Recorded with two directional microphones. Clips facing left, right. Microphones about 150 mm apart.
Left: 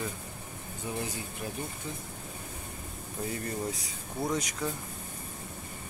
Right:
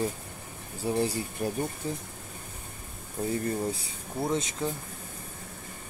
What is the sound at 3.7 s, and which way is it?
Speech, 25° right (ahead or behind).